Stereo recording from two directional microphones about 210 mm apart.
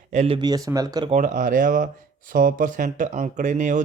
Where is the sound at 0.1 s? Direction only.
35° right (ahead or behind).